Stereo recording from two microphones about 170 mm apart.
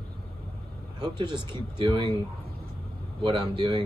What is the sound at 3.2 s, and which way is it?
Speech, 30° right (ahead or behind).